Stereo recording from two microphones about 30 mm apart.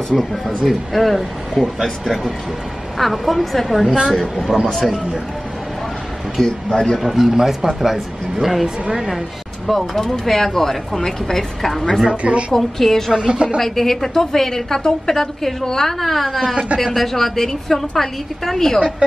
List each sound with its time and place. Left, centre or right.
0.1 s a woman's voice: centre
0.7 s a woman's voice: centre
6.4 s a woman's voice: centre
6.7 s a man's voice: left
7.0 s speech: centre
9.7 s a woman's voice: centre
12.1 s a woman's voice: right
12.5 s a woman's voice: centre
13.1 s a woman's voice: right
13.6 s a woman's voice: centre
18.8 s a woman's voice: right